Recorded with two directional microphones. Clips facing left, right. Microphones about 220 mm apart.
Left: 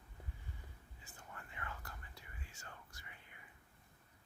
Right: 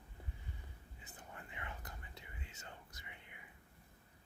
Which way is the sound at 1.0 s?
20° right (ahead or behind).